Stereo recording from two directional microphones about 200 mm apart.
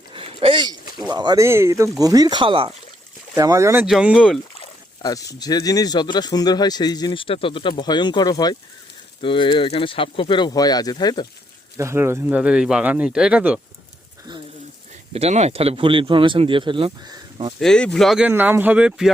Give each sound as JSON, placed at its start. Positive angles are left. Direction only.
{"t": 0.1, "sound": "a sound", "side_deg": -30}
{"t": 1.1, "sound": "speech", "side_deg": -20}
{"t": 3.8, "sound": "speech", "side_deg": -5}
{"t": 4.6, "sound": "a sound", "side_deg": 20}
{"t": 5.3, "sound": "speech", "side_deg": 20}
{"t": 11.8, "sound": "speech", "side_deg": -15}
{"t": 15.1, "sound": "speech", "side_deg": -30}
{"t": 17.6, "sound": "speech", "side_deg": 5}